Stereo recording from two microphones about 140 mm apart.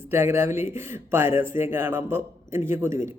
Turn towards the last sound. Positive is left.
turn(degrees=-20)  # may be behind; listen again after turning